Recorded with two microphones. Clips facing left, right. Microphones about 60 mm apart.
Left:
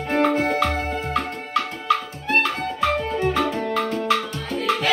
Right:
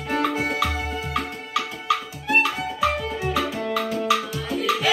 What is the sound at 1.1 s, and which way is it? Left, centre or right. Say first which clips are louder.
Music: left 2 dB; centre.